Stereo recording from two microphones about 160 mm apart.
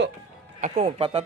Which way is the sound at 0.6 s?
40° right (ahead or behind).